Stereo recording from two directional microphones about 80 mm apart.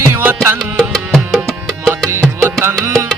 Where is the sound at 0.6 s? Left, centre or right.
Centre.